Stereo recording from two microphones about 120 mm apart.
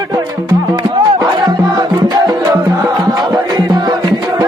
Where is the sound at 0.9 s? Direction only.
40° right (ahead or behind).